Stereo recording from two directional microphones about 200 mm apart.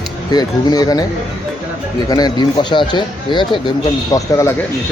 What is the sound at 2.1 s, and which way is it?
Speech, 20° left (ahead or behind).